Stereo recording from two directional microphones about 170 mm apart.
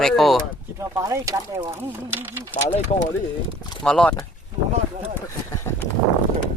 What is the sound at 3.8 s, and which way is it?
Speech, 5° left (ahead or behind).